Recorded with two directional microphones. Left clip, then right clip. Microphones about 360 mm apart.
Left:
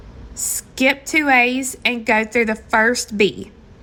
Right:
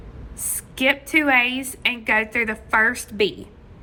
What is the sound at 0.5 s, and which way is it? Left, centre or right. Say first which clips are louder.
A woman's voice: left 2 dB; centre.